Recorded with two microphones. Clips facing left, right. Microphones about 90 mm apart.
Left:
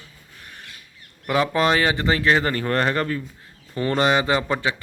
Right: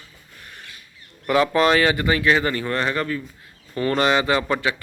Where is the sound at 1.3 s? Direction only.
20° left (ahead or behind); by 3.2 s 40° left (ahead or behind).